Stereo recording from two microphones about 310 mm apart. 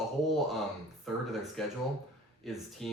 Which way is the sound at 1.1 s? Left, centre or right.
Centre.